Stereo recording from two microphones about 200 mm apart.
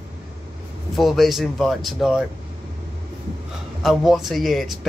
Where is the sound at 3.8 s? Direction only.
Centre (ahead or behind).